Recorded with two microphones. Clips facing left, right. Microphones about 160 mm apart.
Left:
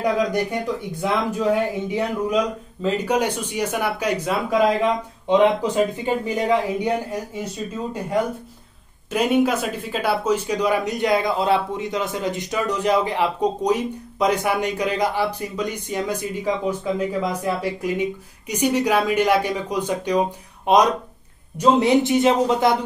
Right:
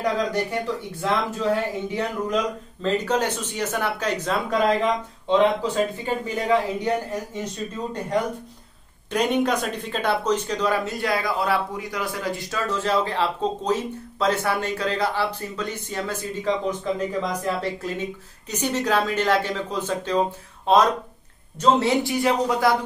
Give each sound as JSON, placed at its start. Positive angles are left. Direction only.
{"t": 0.0, "sound": "speech", "side_deg": 10}